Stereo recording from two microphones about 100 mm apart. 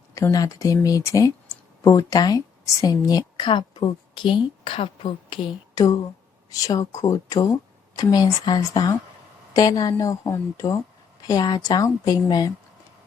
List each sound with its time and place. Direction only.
0.1 s a woman's voice: 30° left (ahead or behind); by 5.8 s 50° left (ahead or behind)
5.8 s a woman's voice: 40° left (ahead or behind)
11.3 s a woman's voice: 45° left (ahead or behind)